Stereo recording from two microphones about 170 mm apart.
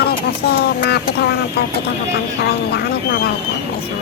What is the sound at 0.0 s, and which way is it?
Speech, 70° left (ahead or behind).